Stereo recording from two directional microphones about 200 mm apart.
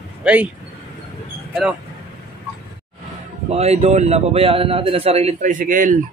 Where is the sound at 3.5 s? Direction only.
30° right (ahead or behind).